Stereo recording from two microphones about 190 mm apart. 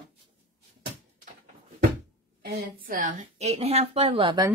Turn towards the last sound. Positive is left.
turn(degrees=-25)  # may be behind; listen again after turning